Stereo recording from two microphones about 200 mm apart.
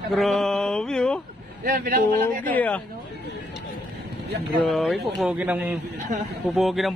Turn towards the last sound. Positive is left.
turn(degrees=0)  # may be behind; listen again after turning